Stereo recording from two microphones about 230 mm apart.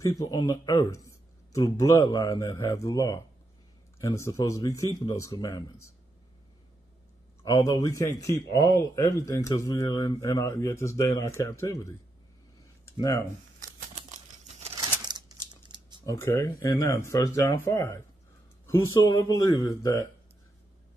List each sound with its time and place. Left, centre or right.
0.0 s speech: centre
7.4 s speech: centre
12.9 s speech: centre
14.8 s crumpling: centre
16.1 s speech: centre